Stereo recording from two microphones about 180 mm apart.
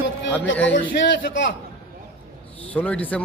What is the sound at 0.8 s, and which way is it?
Speech, 90° left.